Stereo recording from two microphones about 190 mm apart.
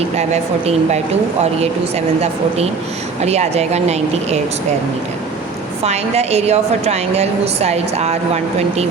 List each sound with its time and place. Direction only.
0.2 s a woman's voice: 35° right (ahead or behind)
3.2 s a woman's voice: 35° right (ahead or behind)
5.8 s a woman's voice: 35° right (ahead or behind)